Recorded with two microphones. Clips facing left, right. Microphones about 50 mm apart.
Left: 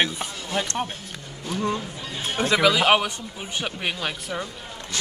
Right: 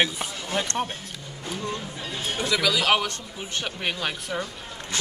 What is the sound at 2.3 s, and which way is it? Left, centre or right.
Speech, left.